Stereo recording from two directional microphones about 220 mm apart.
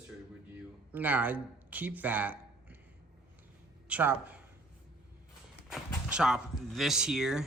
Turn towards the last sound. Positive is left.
turn(degrees=0)  # may be behind; listen again after turning